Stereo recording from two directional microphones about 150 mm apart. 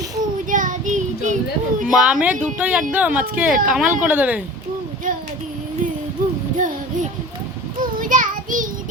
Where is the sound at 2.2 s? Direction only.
10° right (ahead or behind).